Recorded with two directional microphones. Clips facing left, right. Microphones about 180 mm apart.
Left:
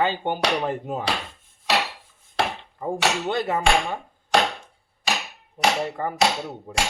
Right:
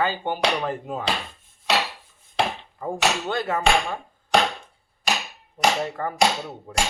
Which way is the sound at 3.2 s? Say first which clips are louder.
Left 2 dB; 20° left (ahead or behind).